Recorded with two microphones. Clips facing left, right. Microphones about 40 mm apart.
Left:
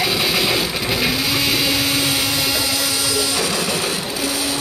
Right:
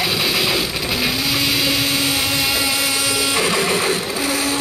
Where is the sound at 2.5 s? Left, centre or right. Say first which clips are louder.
Right 1 dB; centre.